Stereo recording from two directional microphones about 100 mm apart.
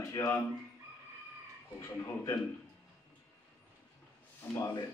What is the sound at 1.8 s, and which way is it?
Speech, 30° left (ahead or behind).